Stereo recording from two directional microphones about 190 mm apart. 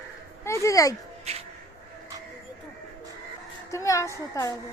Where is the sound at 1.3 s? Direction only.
35° right (ahead or behind).